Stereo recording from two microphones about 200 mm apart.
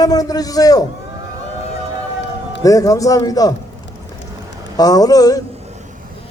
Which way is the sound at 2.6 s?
15° left (ahead or behind).